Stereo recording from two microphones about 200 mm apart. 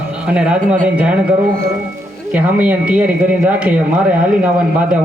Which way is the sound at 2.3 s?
5° right (ahead or behind).